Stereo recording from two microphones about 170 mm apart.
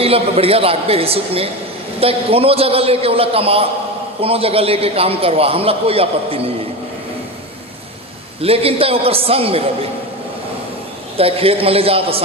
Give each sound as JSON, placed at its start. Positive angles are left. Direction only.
{"t": 0.0, "sound": "a man's voice", "side_deg": -35}
{"t": 8.4, "sound": "a man's voice", "side_deg": -35}
{"t": 11.2, "sound": "a man's voice", "side_deg": -35}